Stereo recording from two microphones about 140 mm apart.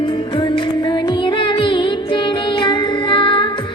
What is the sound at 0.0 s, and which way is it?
Music, 35° left (ahead or behind).